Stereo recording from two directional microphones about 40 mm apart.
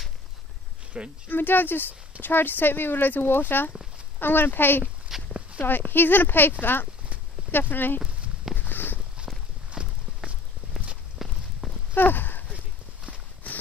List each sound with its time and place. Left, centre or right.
0.9 s speech: right
1.3 s speech: left
5.1 s walk: centre
5.6 s speech: left
8.5 s a sound: left
9.7 s walk: right
11.2 s walk: centre
11.9 s clip-clop: left